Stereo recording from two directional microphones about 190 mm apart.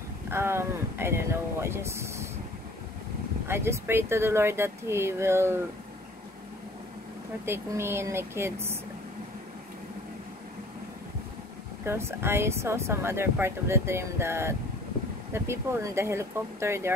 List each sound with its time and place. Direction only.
0.3 s speech: 15° right (ahead or behind)
3.4 s speech: 15° right (ahead or behind)
7.4 s speech: 15° right (ahead or behind)
11.8 s speech: 15° right (ahead or behind)